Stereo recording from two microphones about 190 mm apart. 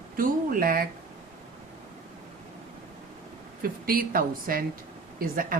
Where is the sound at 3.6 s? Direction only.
50° right (ahead or behind).